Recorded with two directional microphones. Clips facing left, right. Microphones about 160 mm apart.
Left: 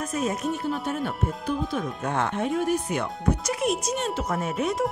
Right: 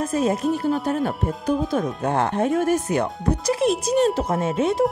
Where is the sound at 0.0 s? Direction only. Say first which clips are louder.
Right 6 dB; 30° right (ahead or behind).